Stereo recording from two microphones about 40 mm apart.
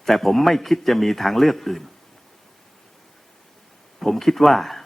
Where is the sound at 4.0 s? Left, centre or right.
Centre.